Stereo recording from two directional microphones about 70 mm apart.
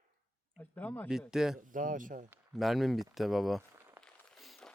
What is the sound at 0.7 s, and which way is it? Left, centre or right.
Speech, left.